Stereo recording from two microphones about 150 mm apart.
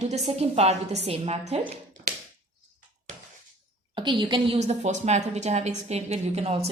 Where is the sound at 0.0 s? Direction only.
45° right (ahead or behind).